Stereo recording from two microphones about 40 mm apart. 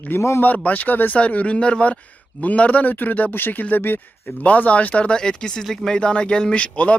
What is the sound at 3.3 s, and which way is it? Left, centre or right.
Speech, left.